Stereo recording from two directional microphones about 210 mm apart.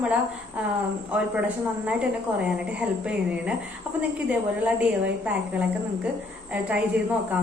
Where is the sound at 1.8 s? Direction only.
5° right (ahead or behind).